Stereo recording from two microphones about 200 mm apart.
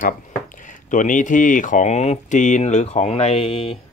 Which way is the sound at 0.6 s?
40° left (ahead or behind).